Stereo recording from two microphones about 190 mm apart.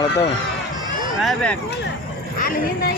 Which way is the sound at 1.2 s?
5° left (ahead or behind).